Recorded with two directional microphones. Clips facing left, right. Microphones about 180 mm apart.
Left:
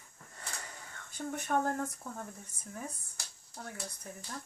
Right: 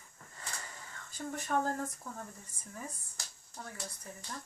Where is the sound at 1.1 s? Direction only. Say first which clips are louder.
Left 2 dB; 60° left (ahead or behind).